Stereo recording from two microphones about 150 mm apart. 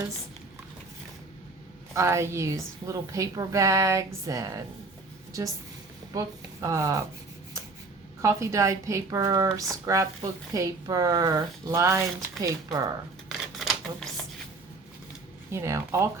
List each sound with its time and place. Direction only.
1.9 s speech: 20° right (ahead or behind)
6.1 s speech: 20° right (ahead or behind)
8.2 s speech: 20° right (ahead or behind)
13.2 s a sound: centre (ahead or behind)
15.5 s speech: 20° right (ahead or behind)